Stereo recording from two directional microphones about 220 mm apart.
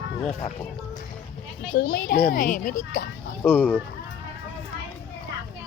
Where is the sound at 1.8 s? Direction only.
45° left (ahead or behind).